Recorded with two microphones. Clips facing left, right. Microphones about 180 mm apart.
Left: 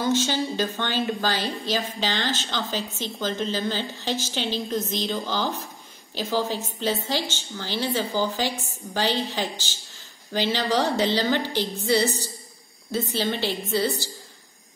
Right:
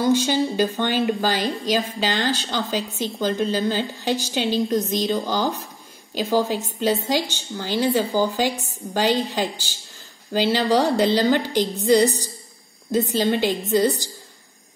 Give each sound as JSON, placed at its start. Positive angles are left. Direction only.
{"t": 0.0, "sound": "a woman's voice", "side_deg": -10}
{"t": 6.1, "sound": "a woman's voice", "side_deg": -15}